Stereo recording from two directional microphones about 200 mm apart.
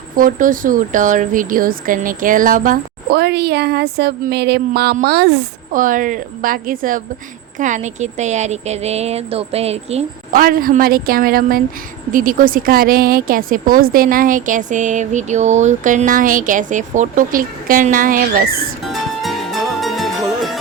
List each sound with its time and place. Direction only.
0.2 s a woman's voice: 45° right (ahead or behind)
10.3 s speech: 45° right (ahead or behind)
18.9 s music: centre (ahead or behind)